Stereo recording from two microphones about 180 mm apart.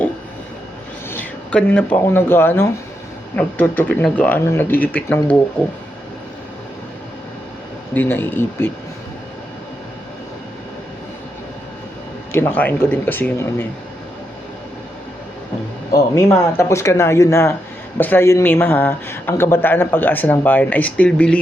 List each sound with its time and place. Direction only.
1.1 s speech: 10° left (ahead or behind)
7.9 s speech: 10° left (ahead or behind)
12.3 s speech: 10° left (ahead or behind)
15.9 s speech: 15° left (ahead or behind)